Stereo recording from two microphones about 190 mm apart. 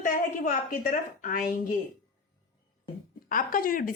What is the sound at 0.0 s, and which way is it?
A woman's voice, 45° left (ahead or behind).